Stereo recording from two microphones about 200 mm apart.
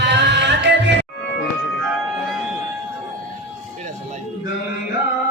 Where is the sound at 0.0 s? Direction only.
60° right (ahead or behind).